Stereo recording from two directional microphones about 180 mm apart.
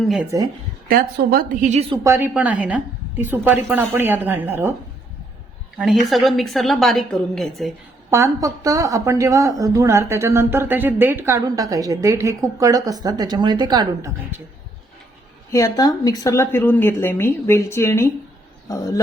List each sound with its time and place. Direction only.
0.3 s a woman's voice: 20° right (ahead or behind)
0.9 s a woman's voice: 55° right (ahead or behind); by 2.0 s 35° right (ahead or behind)
2.0 s a woman's voice: 15° right (ahead or behind)
5.7 s a woman's voice: centre (ahead or behind)
8.1 s a woman's voice: 15° right (ahead or behind)
15.5 s speech: 20° left (ahead or behind)